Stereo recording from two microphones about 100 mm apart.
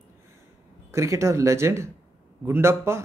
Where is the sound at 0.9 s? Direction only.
30° right (ahead or behind).